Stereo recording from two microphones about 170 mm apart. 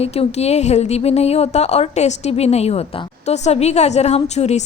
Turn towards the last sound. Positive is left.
turn(degrees=40)  # may be behind; listen again after turning